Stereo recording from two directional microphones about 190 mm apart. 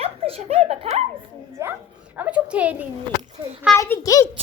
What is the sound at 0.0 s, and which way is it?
Giggle, 30° right (ahead or behind).